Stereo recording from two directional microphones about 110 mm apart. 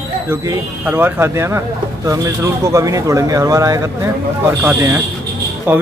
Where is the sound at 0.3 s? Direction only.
20° right (ahead or behind).